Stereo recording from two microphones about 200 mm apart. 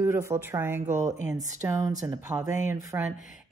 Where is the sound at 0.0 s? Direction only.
15° right (ahead or behind).